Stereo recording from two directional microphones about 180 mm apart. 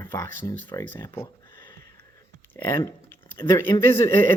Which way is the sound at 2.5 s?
15° left (ahead or behind).